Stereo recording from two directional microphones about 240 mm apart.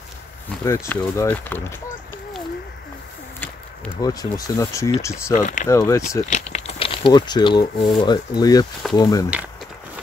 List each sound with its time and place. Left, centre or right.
0.7 s speech: centre
4.0 s speech: centre
5.3 s speech: left
5.7 s speech: centre
6.2 s speech: left